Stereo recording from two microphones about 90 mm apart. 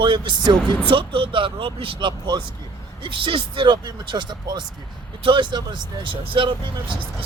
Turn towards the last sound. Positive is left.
turn(degrees=-70)  # may be behind; listen again after turning